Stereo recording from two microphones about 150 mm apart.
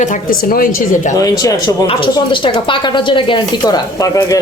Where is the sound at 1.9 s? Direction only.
35° left (ahead or behind).